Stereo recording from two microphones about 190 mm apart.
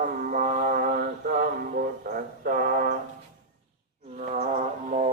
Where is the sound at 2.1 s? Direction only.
50° right (ahead or behind).